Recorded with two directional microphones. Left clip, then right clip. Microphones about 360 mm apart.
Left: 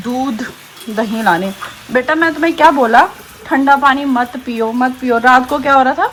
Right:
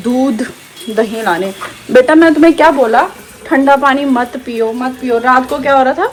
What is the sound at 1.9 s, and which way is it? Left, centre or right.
Speech, centre.